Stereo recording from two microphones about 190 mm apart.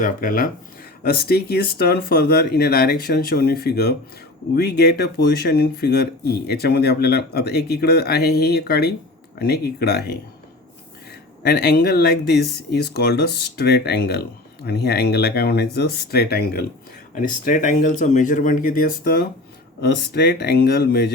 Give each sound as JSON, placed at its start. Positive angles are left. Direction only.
{"t": 0.0, "sound": "speech", "side_deg": 45}
{"t": 11.4, "sound": "speech", "side_deg": 55}
{"t": 17.2, "sound": "speech", "side_deg": 45}
{"t": 19.8, "sound": "speech", "side_deg": 60}